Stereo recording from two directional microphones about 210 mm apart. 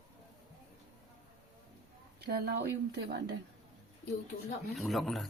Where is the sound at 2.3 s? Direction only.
50° right (ahead or behind).